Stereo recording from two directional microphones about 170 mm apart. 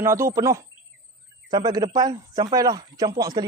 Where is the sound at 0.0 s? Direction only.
15° right (ahead or behind).